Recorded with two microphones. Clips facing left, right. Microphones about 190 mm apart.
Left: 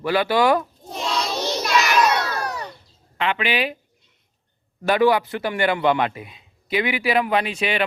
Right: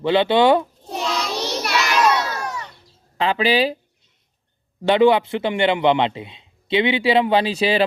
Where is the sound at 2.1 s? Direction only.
55° left (ahead or behind).